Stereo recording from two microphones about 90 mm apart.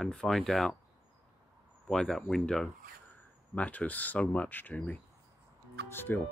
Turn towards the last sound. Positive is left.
turn(degrees=25)  # may be behind; listen again after turning